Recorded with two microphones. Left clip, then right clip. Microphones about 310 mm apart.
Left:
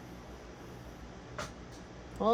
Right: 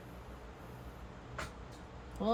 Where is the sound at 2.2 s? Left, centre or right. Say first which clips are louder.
Left 6 dB; centre.